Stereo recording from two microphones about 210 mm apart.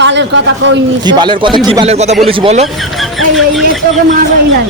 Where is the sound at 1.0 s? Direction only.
20° right (ahead or behind).